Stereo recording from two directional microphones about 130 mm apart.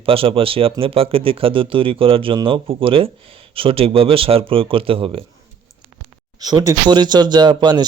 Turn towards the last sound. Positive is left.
turn(degrees=-35)  # may be behind; listen again after turning